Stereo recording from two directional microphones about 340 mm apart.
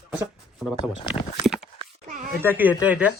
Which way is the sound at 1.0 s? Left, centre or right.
Centre.